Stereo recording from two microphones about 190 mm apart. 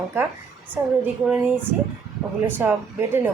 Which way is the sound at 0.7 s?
10° right (ahead or behind).